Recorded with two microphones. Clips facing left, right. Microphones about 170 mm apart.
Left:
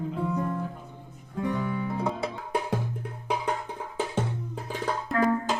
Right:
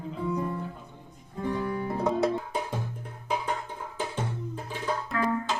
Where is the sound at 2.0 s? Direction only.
10° left (ahead or behind).